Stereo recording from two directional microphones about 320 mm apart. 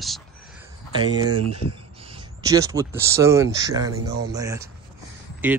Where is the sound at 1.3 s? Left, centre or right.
Right.